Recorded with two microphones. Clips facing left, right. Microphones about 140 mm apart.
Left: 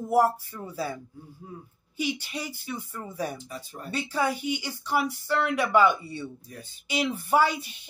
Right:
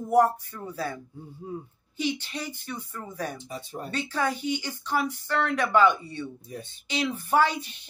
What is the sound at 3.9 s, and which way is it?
Speech, 10° left (ahead or behind).